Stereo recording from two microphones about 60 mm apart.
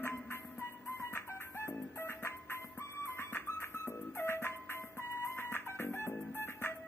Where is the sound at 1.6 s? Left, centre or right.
Left.